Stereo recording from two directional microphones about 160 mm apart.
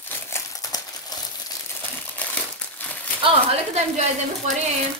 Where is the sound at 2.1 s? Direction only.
10° left (ahead or behind).